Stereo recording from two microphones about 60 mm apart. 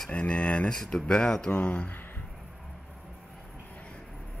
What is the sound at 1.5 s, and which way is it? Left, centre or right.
Speech, left.